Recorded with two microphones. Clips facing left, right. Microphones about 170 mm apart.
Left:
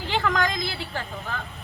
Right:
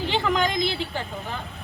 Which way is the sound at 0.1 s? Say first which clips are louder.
Even; 20° right (ahead or behind).